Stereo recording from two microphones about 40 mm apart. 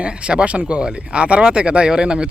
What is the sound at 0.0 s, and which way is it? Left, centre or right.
Speech, right.